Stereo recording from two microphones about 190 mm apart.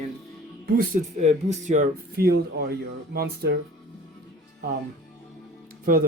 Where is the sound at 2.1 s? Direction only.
55° right (ahead or behind).